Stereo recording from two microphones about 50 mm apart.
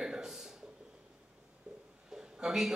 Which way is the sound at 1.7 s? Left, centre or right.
Right.